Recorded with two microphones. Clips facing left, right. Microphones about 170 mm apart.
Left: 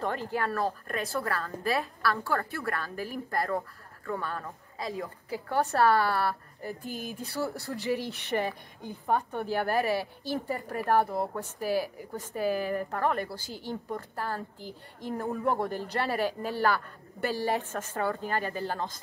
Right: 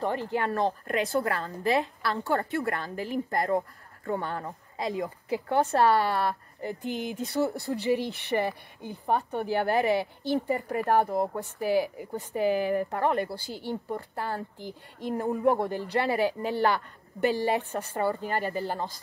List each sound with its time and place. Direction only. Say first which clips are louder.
0.0 s a woman's voice: right 2 dB; 15° right (ahead or behind)